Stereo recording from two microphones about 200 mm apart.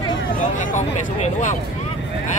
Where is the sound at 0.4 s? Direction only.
40° left (ahead or behind).